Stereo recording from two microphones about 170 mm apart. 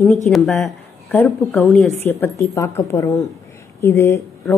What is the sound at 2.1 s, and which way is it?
Speech, 15° left (ahead or behind).